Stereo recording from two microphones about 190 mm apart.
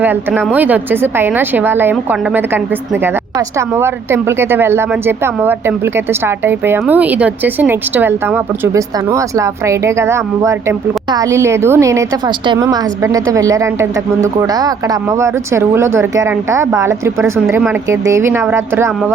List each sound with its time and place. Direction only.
0.0 s a woman's voice: 10° right (ahead or behind)